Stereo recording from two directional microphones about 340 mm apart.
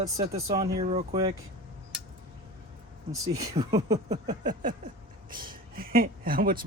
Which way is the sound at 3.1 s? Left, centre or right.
Centre.